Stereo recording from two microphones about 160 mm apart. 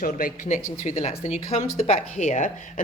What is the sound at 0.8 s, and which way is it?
Speech, 45° left (ahead or behind).